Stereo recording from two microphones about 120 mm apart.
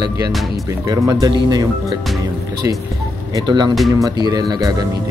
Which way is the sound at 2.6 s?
20° right (ahead or behind).